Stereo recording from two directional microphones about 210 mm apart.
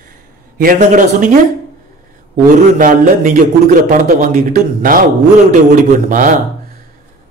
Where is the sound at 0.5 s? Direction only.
40° right (ahead or behind).